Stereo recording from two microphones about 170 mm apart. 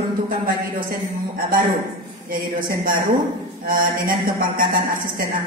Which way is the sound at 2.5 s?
55° right (ahead or behind).